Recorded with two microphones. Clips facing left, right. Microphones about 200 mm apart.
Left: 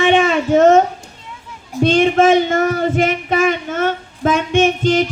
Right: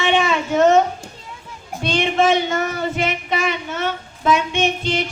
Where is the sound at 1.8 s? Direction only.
50° left (ahead or behind).